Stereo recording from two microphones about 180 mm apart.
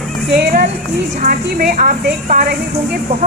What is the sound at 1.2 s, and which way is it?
A woman's voice, 50° right (ahead or behind).